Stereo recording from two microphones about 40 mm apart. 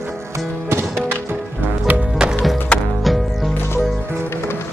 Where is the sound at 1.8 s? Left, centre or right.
Right.